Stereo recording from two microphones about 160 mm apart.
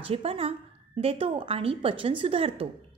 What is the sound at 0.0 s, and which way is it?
A woman's voice, 35° right (ahead or behind).